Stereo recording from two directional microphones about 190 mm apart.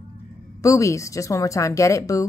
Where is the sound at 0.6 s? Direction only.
15° left (ahead or behind).